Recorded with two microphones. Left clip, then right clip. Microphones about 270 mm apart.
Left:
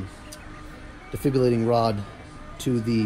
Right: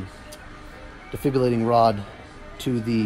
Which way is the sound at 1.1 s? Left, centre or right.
Centre.